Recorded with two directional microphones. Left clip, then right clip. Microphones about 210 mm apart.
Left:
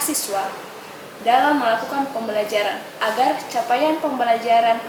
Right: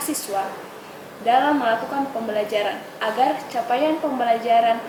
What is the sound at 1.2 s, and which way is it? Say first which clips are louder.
A woman's voice: left 2 dB; 10° right (ahead or behind).